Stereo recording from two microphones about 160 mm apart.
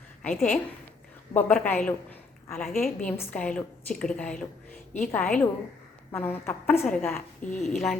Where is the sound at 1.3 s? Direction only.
10° left (ahead or behind).